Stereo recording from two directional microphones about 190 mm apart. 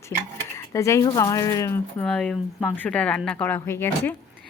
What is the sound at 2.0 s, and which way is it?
Speech, 5° left (ahead or behind).